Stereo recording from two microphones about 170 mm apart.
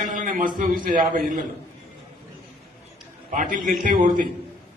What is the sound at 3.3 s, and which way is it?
Speech, 50° right (ahead or behind).